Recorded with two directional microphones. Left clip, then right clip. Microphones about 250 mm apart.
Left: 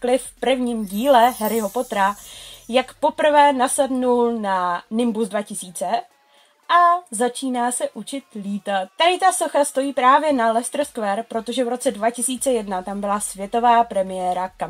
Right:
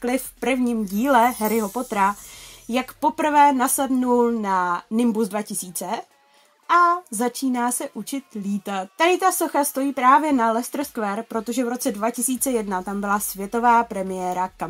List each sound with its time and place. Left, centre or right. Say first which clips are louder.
0.0 s speech: left 4 dB; right
1.5 s speech: left 2 dB; centre
2.7 s speech: left 3 dB; right